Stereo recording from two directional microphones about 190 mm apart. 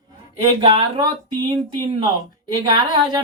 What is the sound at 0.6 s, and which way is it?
Speech, 25° right (ahead or behind).